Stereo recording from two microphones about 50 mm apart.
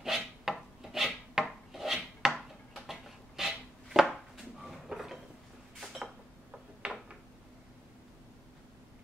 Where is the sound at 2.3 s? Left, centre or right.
Centre.